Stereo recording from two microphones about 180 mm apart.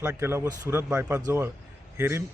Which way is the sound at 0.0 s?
10° right (ahead or behind).